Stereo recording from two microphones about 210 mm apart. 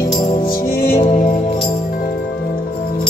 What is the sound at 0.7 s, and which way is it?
Music, 10° left (ahead or behind).